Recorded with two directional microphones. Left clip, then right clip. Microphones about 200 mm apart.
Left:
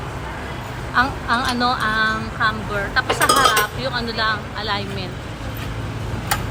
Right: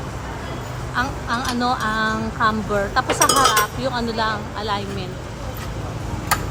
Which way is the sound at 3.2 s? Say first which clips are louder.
Left 1 dB; 5° right (ahead or behind).